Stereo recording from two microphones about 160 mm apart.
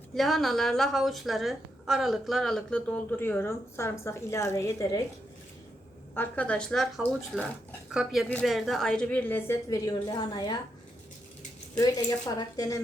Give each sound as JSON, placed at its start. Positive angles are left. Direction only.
{"t": 0.2, "sound": "a woman's voice", "side_deg": 0}
{"t": 6.1, "sound": "a woman's voice", "side_deg": 10}
{"t": 11.8, "sound": "a woman's voice", "side_deg": 25}